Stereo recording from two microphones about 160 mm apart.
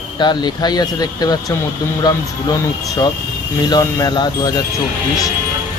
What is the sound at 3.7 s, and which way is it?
Speech, 25° left (ahead or behind).